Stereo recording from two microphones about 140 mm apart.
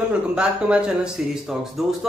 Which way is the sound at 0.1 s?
5° right (ahead or behind).